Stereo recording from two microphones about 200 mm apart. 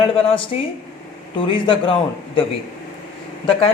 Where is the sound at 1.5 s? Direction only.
25° left (ahead or behind).